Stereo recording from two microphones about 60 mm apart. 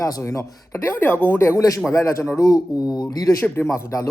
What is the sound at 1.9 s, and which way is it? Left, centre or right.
Speech, left.